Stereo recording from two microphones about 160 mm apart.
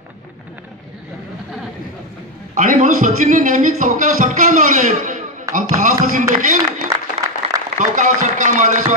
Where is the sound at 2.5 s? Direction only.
55° right (ahead or behind).